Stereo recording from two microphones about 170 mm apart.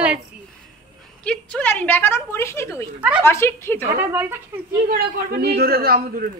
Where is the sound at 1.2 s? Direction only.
5° left (ahead or behind).